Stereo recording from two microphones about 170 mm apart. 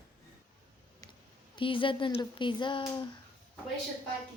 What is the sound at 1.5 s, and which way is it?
Speech, 30° left (ahead or behind).